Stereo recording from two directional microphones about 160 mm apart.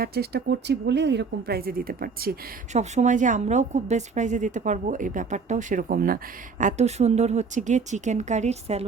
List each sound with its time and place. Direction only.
0.0 s speech: 80° right
2.7 s a woman's voice: 45° right (ahead or behind)
6.6 s a woman's voice: 50° right (ahead or behind)